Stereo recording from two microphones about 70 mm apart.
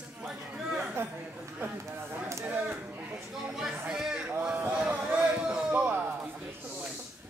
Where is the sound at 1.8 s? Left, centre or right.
Right.